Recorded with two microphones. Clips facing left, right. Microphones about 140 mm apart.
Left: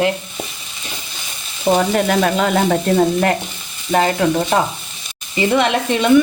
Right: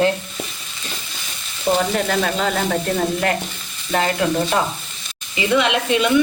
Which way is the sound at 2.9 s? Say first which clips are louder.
Left 5 dB; 30° left (ahead or behind).